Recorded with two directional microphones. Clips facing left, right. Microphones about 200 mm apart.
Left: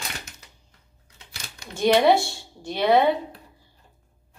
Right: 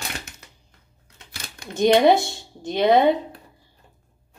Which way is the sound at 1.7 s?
20° right (ahead or behind).